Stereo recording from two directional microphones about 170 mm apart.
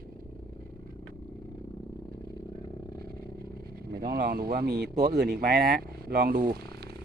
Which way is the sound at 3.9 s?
65° right (ahead or behind).